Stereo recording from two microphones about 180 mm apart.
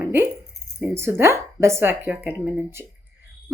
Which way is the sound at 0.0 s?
15° right (ahead or behind).